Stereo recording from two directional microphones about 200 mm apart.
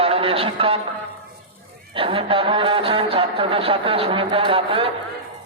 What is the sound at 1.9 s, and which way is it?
Speech, 25° right (ahead or behind).